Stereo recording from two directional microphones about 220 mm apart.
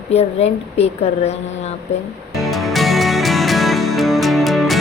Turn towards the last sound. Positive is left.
turn(degrees=0)  # may be behind; listen again after turning